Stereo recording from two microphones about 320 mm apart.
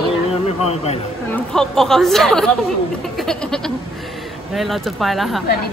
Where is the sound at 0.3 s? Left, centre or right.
Centre.